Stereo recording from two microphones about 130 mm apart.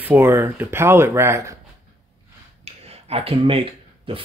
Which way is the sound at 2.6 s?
50° right (ahead or behind).